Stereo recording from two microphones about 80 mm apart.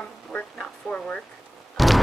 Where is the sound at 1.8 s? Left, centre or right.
Centre.